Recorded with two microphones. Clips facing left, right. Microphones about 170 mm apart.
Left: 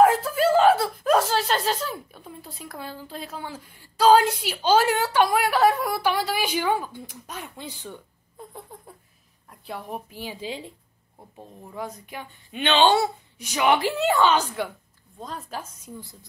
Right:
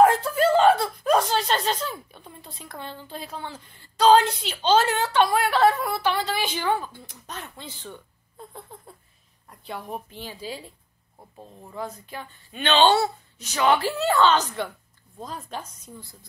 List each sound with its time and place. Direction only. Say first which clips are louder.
0.0 s speech: even; centre (ahead or behind)
9.5 s a woman's voice: even; centre (ahead or behind)
10.3 s a woman's voice: left 2 dB; 20° left (ahead or behind)
11.1 s a woman's voice: left 1 dB; 5° left (ahead or behind)